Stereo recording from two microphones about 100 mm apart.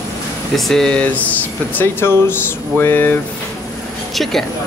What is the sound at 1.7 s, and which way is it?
Speech, 25° left (ahead or behind).